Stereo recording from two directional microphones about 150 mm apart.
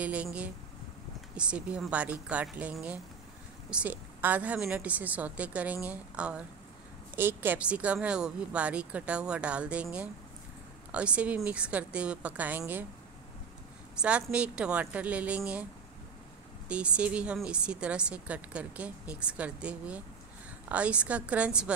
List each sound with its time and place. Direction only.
0.0 s speech: 10° right (ahead or behind)
13.9 s speech: 5° right (ahead or behind)
16.6 s speech: 10° right (ahead or behind)